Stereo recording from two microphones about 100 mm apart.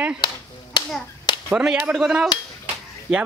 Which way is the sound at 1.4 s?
10° right (ahead or behind).